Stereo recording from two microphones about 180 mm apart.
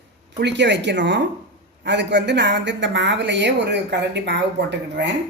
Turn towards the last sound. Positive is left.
turn(degrees=-75)  # may be behind; listen again after turning